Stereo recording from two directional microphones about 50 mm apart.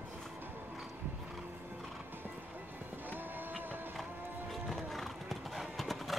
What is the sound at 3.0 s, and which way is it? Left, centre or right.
Run, right.